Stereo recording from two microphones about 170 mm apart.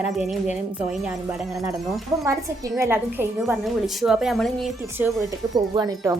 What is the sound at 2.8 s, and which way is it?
Speech, 15° right (ahead or behind).